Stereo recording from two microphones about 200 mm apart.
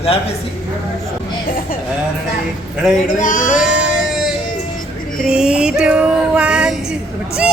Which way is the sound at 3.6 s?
Centre (ahead or behind).